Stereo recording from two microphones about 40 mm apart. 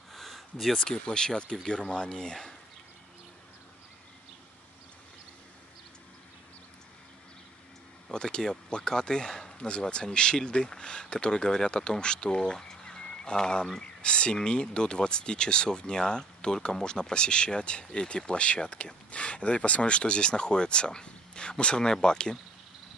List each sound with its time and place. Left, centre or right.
0.1 s a sound: centre
0.7 s speech: left
8.1 s speech: centre